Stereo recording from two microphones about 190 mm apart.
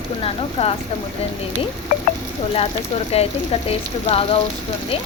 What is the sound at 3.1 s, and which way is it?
Speech, 30° left (ahead or behind).